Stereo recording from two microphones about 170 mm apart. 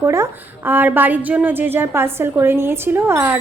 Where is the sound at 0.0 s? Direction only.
15° right (ahead or behind).